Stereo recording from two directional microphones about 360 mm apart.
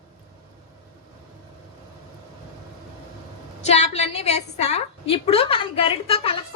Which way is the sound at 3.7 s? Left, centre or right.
Centre.